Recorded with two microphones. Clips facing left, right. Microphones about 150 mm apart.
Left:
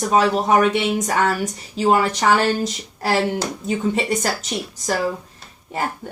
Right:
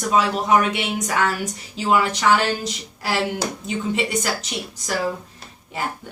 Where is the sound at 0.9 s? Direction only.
45° left (ahead or behind).